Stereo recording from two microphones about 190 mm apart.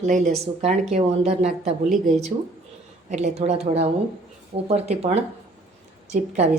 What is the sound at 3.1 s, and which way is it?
Speech, 40° right (ahead or behind).